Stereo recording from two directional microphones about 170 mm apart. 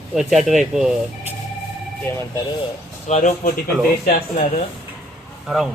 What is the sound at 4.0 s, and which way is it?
Speech, 55° left (ahead or behind).